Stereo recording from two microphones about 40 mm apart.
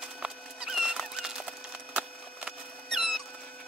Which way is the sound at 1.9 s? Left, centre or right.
Right.